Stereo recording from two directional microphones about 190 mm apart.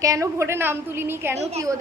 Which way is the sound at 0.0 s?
15° right (ahead or behind).